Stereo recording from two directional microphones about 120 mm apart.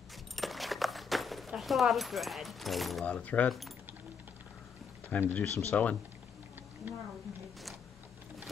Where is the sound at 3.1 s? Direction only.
10° left (ahead or behind).